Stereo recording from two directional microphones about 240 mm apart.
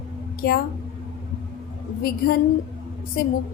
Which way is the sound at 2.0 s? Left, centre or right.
Left.